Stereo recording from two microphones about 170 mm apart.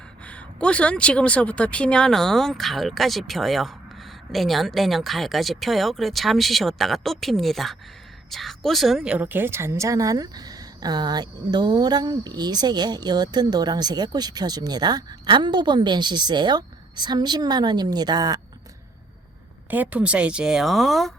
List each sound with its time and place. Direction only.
0.3 s a woman's voice: 5° left (ahead or behind); by 18.3 s 25° right (ahead or behind)
19.7 s speech: 10° right (ahead or behind)